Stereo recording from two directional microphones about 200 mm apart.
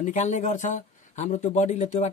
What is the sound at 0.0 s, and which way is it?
Speech, 40° left (ahead or behind).